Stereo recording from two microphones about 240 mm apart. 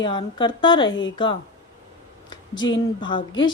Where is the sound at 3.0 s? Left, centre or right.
Centre.